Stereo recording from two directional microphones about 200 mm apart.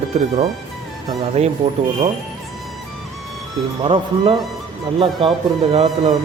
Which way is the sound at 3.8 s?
25° right (ahead or behind).